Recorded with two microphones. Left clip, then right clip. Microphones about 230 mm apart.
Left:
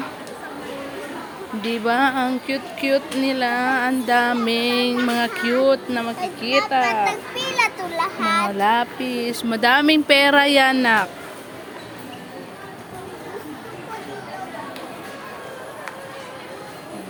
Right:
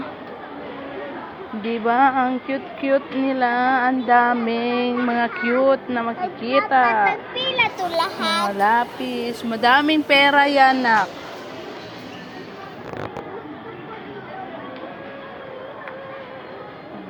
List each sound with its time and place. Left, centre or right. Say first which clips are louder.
2.0 s speech: right 2 dB; left
4.0 s speech: right 3 dB; left
6.2 s a child's voice: left 1 dB; centre
6.7 s speech: right 3 dB; left